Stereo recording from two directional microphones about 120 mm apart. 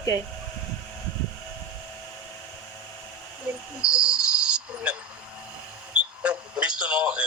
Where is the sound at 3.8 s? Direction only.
10° right (ahead or behind).